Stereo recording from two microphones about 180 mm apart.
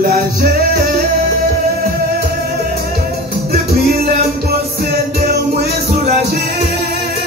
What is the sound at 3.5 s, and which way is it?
Music, 55° right (ahead or behind).